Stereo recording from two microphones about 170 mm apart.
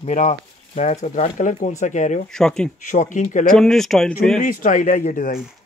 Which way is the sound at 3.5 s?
5° left (ahead or behind).